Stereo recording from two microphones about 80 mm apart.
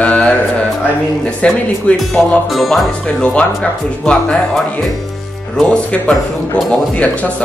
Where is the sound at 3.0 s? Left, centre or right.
Centre.